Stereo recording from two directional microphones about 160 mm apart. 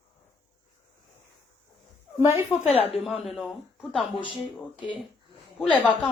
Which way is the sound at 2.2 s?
15° right (ahead or behind).